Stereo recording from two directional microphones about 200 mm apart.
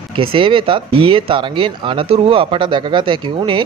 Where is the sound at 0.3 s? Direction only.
25° right (ahead or behind).